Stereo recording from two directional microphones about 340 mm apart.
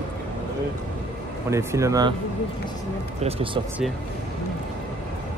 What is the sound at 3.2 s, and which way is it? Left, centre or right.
Speech, centre.